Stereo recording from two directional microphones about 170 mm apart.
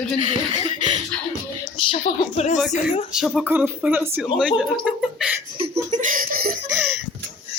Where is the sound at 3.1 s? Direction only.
5° right (ahead or behind).